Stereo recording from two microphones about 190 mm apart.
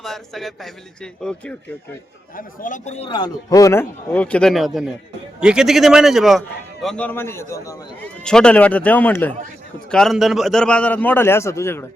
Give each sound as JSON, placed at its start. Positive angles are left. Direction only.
{"t": 0.0, "sound": "a man's voice", "side_deg": 0}
{"t": 2.3, "sound": "speech", "side_deg": 45}
{"t": 3.1, "sound": "a man's voice", "side_deg": 20}
{"t": 8.2, "sound": "a man's voice", "side_deg": 5}